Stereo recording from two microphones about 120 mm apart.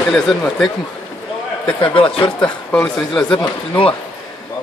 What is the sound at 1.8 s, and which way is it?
Speech, 50° left (ahead or behind).